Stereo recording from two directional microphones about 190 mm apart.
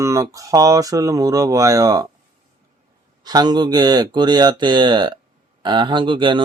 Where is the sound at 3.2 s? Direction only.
20° right (ahead or behind).